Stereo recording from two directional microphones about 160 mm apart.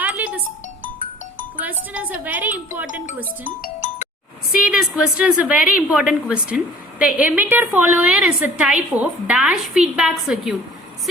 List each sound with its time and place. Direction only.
0.0 s music: 10° right (ahead or behind)
1.9 s a woman's voice: 10° right (ahead or behind)
3.6 s music: 50° left (ahead or behind)
4.6 s a woman's voice: 5° right (ahead or behind)